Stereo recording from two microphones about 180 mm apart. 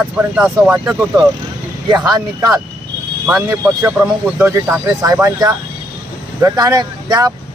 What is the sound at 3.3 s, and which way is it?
Speech, 10° right (ahead or behind).